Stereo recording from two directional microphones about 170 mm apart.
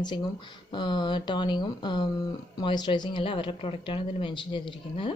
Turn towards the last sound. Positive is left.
turn(degrees=30)  # may be behind; listen again after turning